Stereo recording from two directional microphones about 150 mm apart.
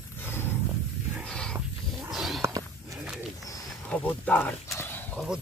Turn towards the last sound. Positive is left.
turn(degrees=15)  # may be behind; listen again after turning